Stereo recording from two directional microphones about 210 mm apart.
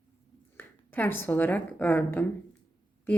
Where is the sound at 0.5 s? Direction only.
10° left (ahead or behind).